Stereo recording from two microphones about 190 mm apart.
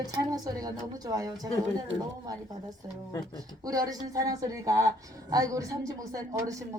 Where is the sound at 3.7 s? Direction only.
20° right (ahead or behind).